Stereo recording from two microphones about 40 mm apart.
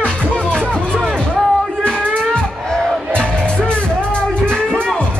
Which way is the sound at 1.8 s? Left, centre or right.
Left.